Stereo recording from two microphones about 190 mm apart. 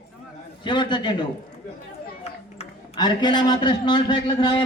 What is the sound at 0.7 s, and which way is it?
Speech, 25° left (ahead or behind).